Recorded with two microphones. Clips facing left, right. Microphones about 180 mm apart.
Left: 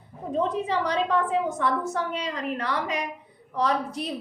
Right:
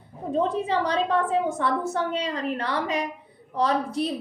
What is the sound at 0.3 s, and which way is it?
A woman's voice, 30° right (ahead or behind).